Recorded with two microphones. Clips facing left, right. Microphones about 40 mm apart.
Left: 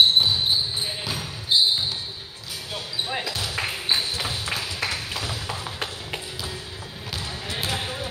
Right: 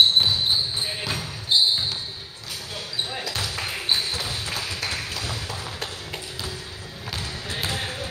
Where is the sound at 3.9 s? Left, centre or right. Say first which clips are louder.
Left 1 dB; centre.